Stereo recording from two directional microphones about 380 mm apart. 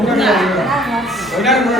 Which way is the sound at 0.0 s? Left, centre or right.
Centre.